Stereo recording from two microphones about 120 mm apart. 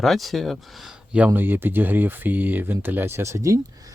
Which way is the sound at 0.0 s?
Centre (ahead or behind).